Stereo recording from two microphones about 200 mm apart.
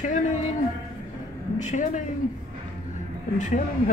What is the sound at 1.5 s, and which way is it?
Speech, 40° left (ahead or behind).